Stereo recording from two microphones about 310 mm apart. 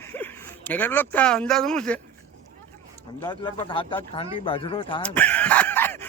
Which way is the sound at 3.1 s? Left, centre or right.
Centre.